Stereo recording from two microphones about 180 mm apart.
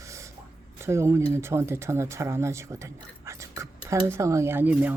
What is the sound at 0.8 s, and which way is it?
Speech, 15° right (ahead or behind).